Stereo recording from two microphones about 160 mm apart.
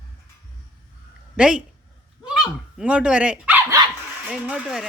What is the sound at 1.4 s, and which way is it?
Speech, 5° right (ahead or behind).